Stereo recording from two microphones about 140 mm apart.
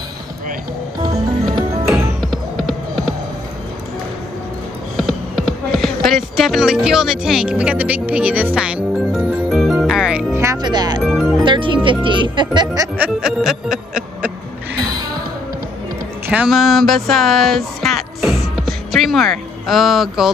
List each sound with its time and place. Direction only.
2.3 s music: centre (ahead or behind)
4.9 s a sound: centre (ahead or behind)
10.3 s speech: 20° right (ahead or behind)
11.0 s music: centre (ahead or behind)
11.4 s speech: 35° right (ahead or behind)
12.9 s music: 5° right (ahead or behind)
16.3 s speech: 5° right (ahead or behind)
18.6 s music: centre (ahead or behind)